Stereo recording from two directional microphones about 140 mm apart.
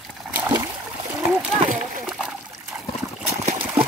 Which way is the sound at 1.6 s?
60° right (ahead or behind).